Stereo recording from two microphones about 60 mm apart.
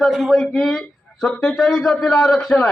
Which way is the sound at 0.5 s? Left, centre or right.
Centre.